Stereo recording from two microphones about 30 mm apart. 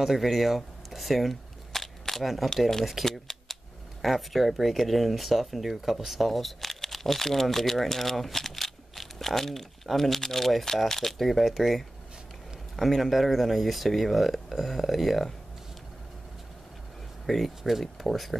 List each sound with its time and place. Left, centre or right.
0.0 s a sound: centre
2.2 s speech: centre
3.1 s speech: centre
4.0 s speech: centre
17.3 s speech: centre